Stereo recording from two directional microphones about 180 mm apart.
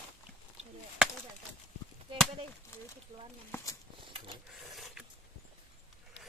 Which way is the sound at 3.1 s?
40° right (ahead or behind).